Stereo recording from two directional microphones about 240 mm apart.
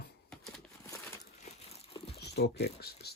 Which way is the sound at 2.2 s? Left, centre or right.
Left.